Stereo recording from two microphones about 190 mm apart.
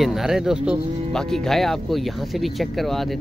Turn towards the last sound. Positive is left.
turn(degrees=0)  # may be behind; listen again after turning